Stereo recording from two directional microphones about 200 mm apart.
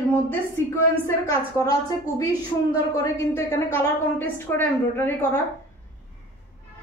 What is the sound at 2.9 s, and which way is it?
A woman's voice, 15° left (ahead or behind).